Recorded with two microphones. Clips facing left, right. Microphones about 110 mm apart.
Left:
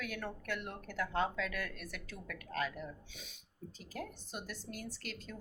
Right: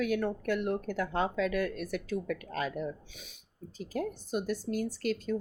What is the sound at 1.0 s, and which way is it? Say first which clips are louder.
Speech: right 2 dB; 15° right (ahead or behind).